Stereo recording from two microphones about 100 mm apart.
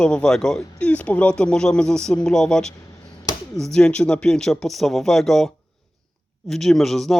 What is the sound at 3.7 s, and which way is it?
Speech, 10° left (ahead or behind).